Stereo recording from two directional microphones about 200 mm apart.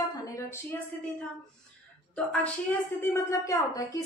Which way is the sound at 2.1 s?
5° left (ahead or behind).